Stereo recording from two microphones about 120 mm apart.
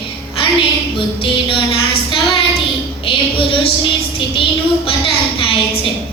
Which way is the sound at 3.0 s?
50° left (ahead or behind).